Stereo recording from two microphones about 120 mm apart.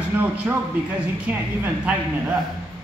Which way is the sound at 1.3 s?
10° right (ahead or behind).